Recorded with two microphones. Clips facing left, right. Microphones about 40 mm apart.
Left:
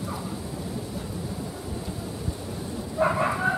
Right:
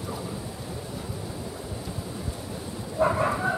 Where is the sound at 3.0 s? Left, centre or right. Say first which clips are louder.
Even; centre.